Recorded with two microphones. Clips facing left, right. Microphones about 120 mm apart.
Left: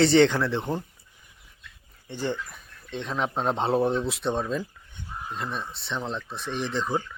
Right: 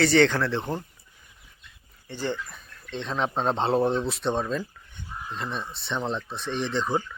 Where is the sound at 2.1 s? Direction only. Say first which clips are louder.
Left 1 dB; 15° left (ahead or behind).